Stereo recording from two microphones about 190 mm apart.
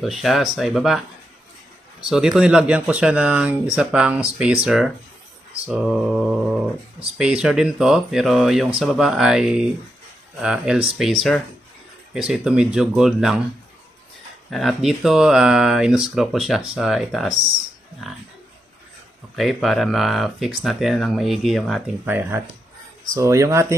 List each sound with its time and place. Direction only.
0.0 s speech: centre (ahead or behind)
14.5 s speech: centre (ahead or behind)
19.3 s speech: centre (ahead or behind)
22.0 s speech: 10° right (ahead or behind)